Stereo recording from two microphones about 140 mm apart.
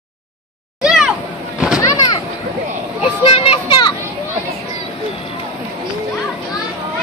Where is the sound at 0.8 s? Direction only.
5° right (ahead or behind).